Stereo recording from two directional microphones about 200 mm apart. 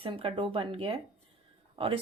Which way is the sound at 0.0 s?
25° right (ahead or behind).